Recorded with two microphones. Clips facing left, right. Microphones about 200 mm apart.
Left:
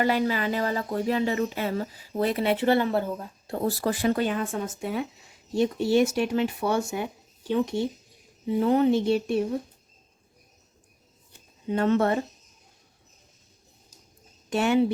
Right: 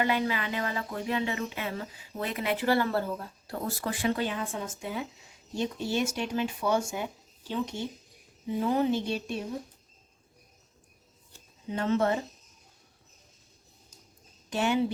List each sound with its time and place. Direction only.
0.0 s speech: 40° left (ahead or behind)
3.7 s speech: 35° left (ahead or behind); by 9.4 s 60° left (ahead or behind)
11.7 s speech: 60° left (ahead or behind)
14.5 s speech: 60° left (ahead or behind)